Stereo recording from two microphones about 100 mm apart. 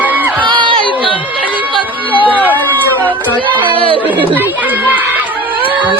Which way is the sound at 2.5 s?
20° left (ahead or behind).